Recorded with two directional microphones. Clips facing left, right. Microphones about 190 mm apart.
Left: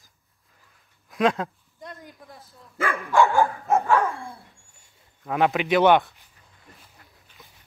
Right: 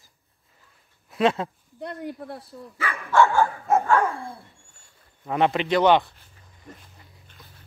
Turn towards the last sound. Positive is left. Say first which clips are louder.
# right 1 dB
turn(degrees=5)  # may be behind; listen again after turning